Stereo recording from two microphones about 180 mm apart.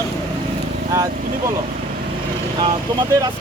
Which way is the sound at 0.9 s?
20° right (ahead or behind).